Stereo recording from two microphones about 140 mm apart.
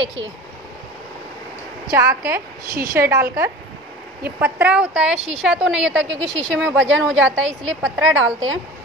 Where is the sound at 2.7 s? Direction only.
90° right.